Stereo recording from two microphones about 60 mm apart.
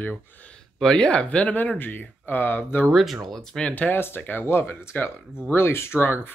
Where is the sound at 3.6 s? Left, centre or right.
Left.